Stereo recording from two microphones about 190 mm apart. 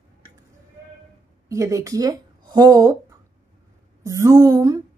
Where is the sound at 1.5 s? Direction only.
15° right (ahead or behind).